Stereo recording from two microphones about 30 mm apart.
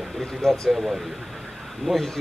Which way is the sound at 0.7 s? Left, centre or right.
Centre.